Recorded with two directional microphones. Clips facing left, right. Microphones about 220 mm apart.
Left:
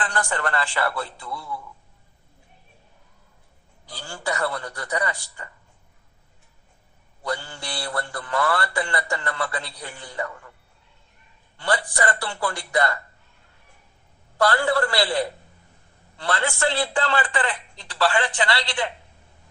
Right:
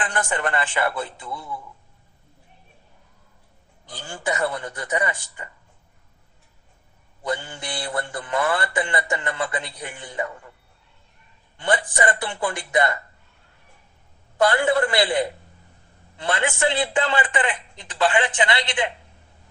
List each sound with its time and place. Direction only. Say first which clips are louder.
0.0 s a man's voice: right 1 dB; 20° right (ahead or behind)
3.8 s a man's voice: right 2 dB; 20° right (ahead or behind)
7.2 s a man's voice: right 2 dB; 20° right (ahead or behind)
11.5 s a man's voice: right 2 dB; 20° right (ahead or behind)
14.3 s a man's voice: right 2 dB; 20° right (ahead or behind)